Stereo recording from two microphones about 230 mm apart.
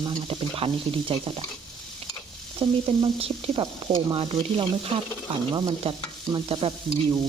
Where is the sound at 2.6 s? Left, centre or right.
Right.